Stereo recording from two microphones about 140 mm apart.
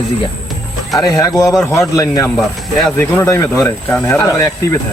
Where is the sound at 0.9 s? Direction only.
25° left (ahead or behind).